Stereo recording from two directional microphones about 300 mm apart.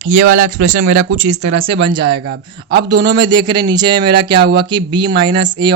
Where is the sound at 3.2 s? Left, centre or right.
Centre.